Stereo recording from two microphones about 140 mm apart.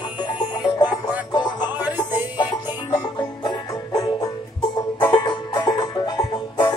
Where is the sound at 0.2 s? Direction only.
30° left (ahead or behind).